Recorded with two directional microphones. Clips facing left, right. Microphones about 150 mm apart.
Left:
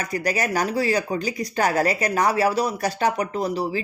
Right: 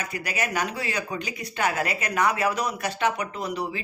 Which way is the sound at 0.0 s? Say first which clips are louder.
Left 6 dB; 35° left (ahead or behind).